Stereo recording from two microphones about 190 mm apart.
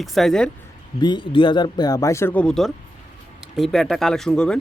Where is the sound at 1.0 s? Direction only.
25° left (ahead or behind).